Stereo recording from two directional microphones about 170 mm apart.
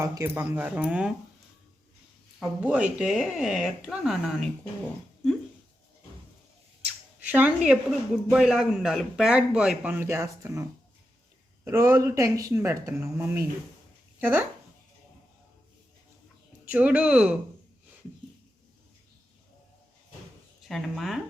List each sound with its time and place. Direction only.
0.0 s speech: 20° right (ahead or behind)
2.6 s speech: 10° right (ahead or behind)
7.3 s speech: 10° right (ahead or behind)
16.6 s speech: 10° right (ahead or behind)
20.7 s speech: centre (ahead or behind)